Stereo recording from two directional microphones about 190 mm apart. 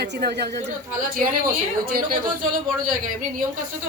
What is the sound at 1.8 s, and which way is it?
Speech, 50° right (ahead or behind).